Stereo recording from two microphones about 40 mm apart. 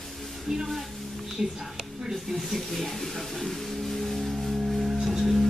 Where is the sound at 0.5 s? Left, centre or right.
Centre.